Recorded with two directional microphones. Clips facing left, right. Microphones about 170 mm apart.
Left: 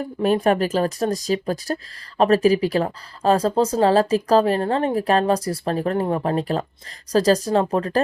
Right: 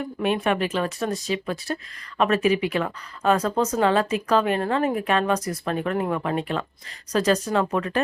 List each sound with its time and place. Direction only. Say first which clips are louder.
0.0 s speech: left 5 dB; 35° left (ahead or behind)